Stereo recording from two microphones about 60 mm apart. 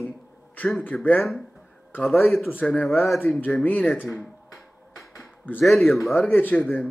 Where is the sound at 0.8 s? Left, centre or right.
Left.